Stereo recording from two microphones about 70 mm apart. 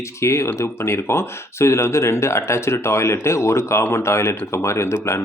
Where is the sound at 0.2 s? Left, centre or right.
Left.